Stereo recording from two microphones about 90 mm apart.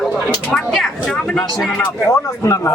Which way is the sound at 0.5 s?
5° left (ahead or behind).